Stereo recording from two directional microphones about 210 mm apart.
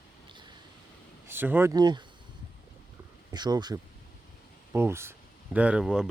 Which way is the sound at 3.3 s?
20° right (ahead or behind).